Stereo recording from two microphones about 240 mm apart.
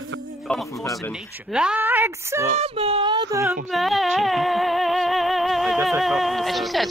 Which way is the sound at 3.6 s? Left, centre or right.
Centre.